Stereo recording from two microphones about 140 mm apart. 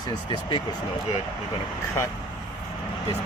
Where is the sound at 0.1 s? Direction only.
35° left (ahead or behind).